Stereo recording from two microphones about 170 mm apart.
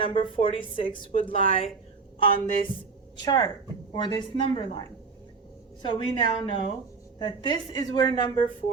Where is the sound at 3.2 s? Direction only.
25° left (ahead or behind).